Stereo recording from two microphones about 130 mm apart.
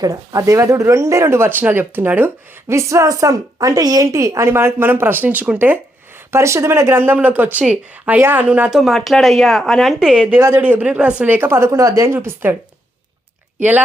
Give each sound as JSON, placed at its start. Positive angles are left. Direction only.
{"t": 0.0, "sound": "speech", "side_deg": -25}
{"t": 8.8, "sound": "speech", "side_deg": 0}
{"t": 13.6, "sound": "speech", "side_deg": -15}